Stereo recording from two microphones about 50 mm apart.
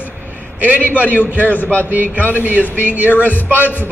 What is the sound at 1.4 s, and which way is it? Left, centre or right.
Speech, left.